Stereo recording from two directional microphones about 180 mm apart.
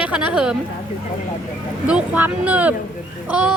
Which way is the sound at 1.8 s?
5° right (ahead or behind).